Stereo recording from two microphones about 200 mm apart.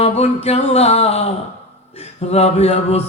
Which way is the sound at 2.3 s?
30° left (ahead or behind).